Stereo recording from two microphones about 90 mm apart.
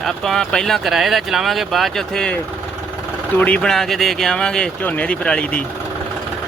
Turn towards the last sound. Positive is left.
turn(degrees=10)  # may be behind; listen again after turning